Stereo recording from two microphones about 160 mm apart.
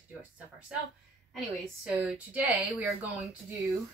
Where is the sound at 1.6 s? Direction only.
5° right (ahead or behind).